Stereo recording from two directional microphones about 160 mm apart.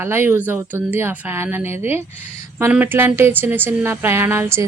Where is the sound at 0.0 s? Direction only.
15° right (ahead or behind).